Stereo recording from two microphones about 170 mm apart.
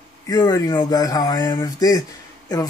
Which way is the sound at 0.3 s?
20° left (ahead or behind).